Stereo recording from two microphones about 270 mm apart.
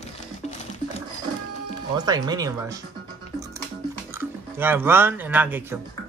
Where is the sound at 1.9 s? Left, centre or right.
Centre.